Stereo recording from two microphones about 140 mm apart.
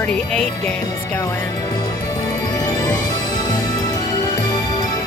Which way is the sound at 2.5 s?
25° left (ahead or behind).